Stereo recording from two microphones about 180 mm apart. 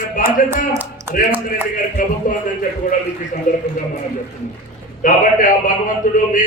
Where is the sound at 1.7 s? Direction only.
50° left (ahead or behind).